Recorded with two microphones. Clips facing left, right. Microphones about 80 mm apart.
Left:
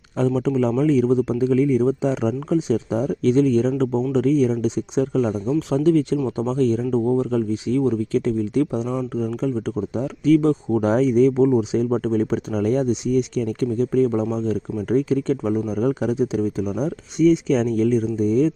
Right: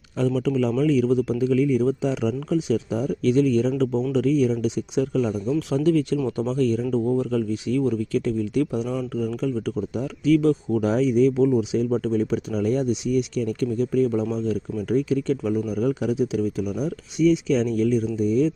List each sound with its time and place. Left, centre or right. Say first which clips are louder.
0.2 s speech: left 2 dB; left